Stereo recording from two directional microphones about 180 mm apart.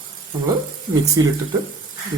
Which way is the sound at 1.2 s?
20° right (ahead or behind).